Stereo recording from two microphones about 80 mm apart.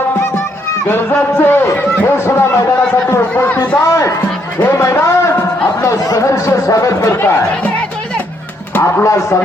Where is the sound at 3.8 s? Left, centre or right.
Left.